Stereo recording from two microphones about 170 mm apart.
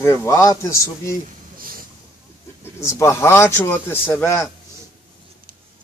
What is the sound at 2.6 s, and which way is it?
A man's voice, 15° left (ahead or behind).